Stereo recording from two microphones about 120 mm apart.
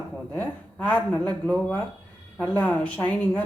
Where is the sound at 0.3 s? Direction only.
10° left (ahead or behind).